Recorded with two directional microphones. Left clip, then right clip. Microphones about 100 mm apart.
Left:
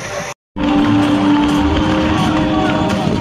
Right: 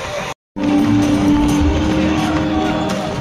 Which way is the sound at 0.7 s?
10° right (ahead or behind).